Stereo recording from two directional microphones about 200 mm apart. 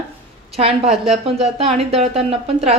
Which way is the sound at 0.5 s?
30° right (ahead or behind).